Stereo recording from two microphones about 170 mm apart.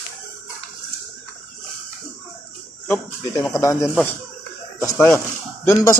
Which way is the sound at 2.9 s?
15° left (ahead or behind).